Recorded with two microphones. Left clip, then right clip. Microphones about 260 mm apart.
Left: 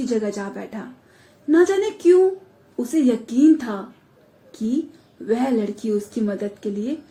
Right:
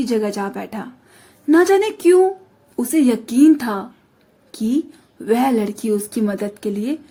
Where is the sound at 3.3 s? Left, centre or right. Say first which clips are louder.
Right 3 dB; right.